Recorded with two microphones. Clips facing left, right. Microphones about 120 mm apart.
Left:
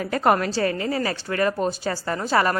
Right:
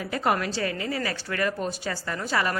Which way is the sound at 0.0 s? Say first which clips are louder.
Left 5 dB; 50° left (ahead or behind).